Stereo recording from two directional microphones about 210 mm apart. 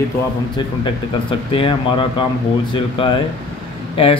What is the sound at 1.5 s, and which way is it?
Speech, 25° left (ahead or behind).